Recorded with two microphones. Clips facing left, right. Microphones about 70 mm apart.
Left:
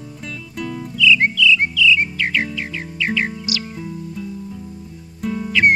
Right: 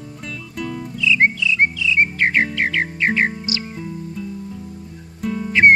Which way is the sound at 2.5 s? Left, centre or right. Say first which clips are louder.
Right 8 dB; right.